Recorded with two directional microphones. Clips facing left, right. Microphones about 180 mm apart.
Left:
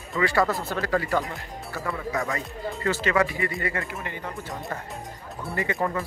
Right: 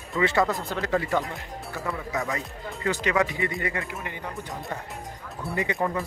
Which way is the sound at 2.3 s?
15° right (ahead or behind).